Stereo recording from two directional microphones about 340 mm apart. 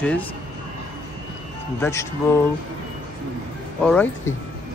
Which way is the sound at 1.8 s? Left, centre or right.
Centre.